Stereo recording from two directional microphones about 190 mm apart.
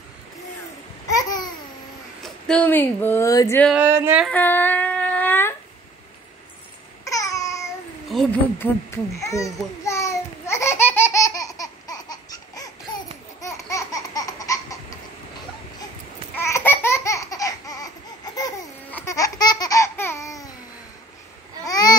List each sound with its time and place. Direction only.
1.0 s babbling: 20° left (ahead or behind)
2.2 s speech: 5° left (ahead or behind)
3.6 s speech: 10° right (ahead or behind)
4.3 s a sound: 10° left (ahead or behind)
7.1 s babbling: 15° left (ahead or behind)
8.1 s a sound: centre (ahead or behind)
8.5 s speech: 15° left (ahead or behind)
9.8 s laughter: 15° left (ahead or behind)
16.3 s laughter: 15° left (ahead or behind)
21.6 s babbling: 20° left (ahead or behind)